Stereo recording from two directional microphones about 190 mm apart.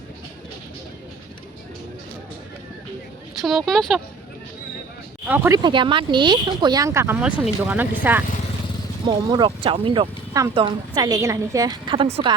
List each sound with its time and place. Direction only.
3.4 s speech: centre (ahead or behind)
5.3 s speech: 10° right (ahead or behind)
5.6 s speech: 25° right (ahead or behind)
9.0 s speech: 25° right (ahead or behind)